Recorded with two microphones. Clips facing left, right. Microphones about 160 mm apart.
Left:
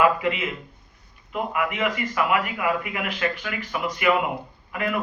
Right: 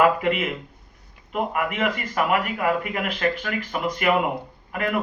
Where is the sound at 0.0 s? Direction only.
50° right (ahead or behind).